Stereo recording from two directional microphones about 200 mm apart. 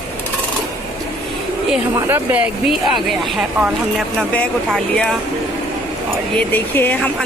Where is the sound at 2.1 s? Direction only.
10° right (ahead or behind).